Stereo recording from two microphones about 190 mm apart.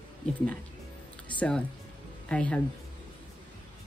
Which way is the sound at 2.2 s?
5° left (ahead or behind).